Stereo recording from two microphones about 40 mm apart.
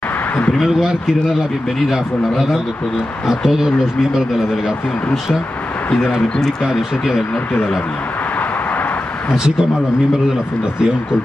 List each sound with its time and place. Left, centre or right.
3.3 s speech: centre
5.9 s speech: left